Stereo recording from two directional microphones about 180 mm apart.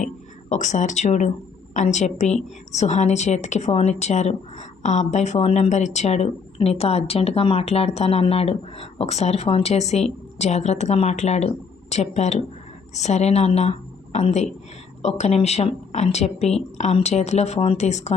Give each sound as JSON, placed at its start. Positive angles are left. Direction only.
{"t": 0.5, "sound": "a woman's voice", "side_deg": 40}